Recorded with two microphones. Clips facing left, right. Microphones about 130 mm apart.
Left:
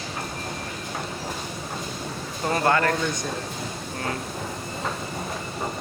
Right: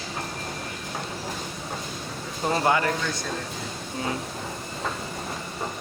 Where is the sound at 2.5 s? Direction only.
15° right (ahead or behind).